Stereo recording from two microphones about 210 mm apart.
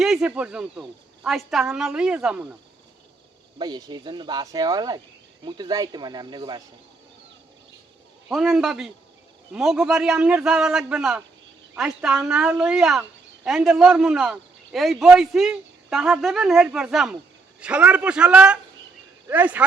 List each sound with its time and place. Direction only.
0.0 s speech: 5° right (ahead or behind)
3.6 s speech: 20° right (ahead or behind)
8.3 s speech: centre (ahead or behind)